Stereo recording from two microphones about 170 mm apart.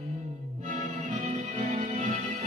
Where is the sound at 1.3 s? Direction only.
35° right (ahead or behind).